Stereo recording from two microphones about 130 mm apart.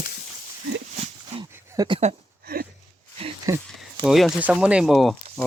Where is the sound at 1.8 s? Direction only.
40° right (ahead or behind).